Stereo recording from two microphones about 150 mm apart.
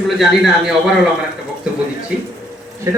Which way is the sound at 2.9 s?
20° right (ahead or behind).